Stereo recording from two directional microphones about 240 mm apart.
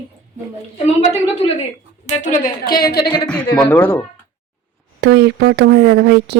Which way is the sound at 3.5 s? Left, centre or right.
Centre.